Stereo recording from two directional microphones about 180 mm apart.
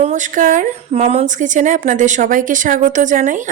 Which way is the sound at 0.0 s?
45° right (ahead or behind).